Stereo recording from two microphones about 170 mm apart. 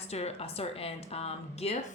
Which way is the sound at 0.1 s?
40° left (ahead or behind).